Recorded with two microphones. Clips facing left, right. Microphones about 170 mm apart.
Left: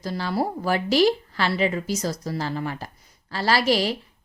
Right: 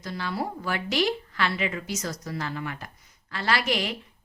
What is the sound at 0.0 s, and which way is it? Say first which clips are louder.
A woman's voice: left 5 dB; 35° left (ahead or behind).